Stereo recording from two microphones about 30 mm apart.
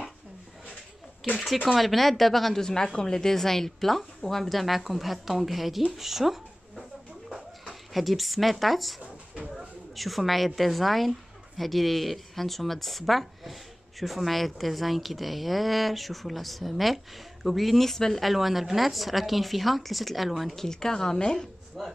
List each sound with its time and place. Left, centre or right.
1.2 s a woman's voice: centre
2.6 s a woman's voice: left
3.3 s a woman's voice: centre
5.9 s a sound: centre
7.9 s a woman's voice: centre
9.9 s a woman's voice: centre
18.2 s a woman's voice: centre
20.5 s a woman's voice: centre
21.8 s speech: centre